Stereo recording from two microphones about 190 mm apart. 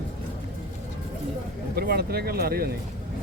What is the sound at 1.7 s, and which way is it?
Speech, 55° right (ahead or behind).